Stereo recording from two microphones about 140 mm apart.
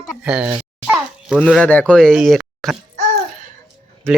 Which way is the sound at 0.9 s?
5° right (ahead or behind).